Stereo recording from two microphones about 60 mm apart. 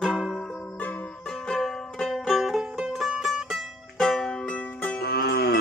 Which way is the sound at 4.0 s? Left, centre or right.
Centre.